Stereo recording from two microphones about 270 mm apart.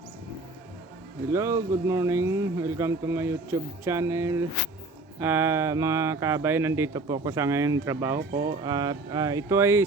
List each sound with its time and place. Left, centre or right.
1.3 s speech: centre